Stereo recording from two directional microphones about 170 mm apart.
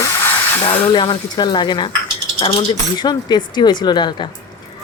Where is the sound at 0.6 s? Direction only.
30° left (ahead or behind).